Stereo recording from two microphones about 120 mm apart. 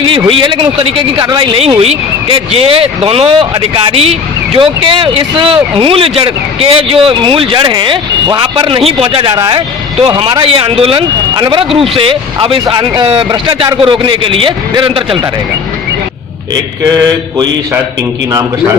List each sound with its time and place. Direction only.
0.3 s speech: 45° right (ahead or behind)
1.8 s speech: 55° right (ahead or behind)
4.5 s speech: 45° right (ahead or behind)
9.3 s speech: 35° right (ahead or behind)